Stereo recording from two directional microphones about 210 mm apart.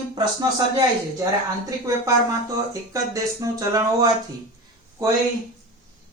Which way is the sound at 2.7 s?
15° right (ahead or behind).